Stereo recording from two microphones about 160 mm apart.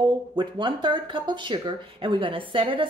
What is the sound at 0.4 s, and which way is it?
Speech, 30° right (ahead or behind).